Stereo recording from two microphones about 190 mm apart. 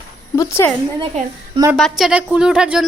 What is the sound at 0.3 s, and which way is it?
Speech, 15° left (ahead or behind).